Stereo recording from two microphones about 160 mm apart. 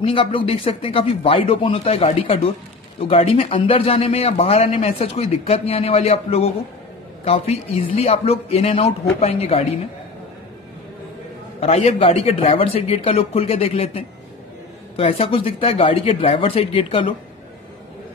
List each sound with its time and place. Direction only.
0.0 s a man's voice: 35° left (ahead or behind)
11.6 s a man's voice: 40° left (ahead or behind)